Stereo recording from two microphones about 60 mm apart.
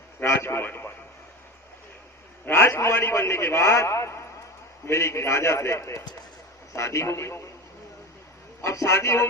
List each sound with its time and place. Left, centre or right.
0.2 s a man's voice: left
0.6 s radio: left
2.5 s a man's voice: left
8.6 s a man's voice: left